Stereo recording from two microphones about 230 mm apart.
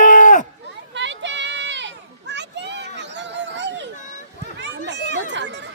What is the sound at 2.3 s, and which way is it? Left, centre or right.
Children playing, right.